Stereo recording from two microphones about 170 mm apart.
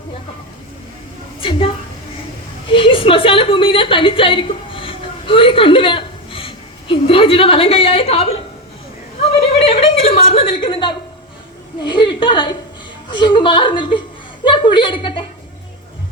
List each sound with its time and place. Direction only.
1.4 s a woman's voice: 30° left (ahead or behind)
2.7 s a woman's voice: 30° left (ahead or behind)
9.2 s a sound: 35° left (ahead or behind)
11.8 s a woman's voice: 25° left (ahead or behind)